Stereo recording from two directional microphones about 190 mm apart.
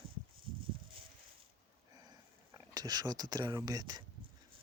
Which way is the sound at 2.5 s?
20° right (ahead or behind).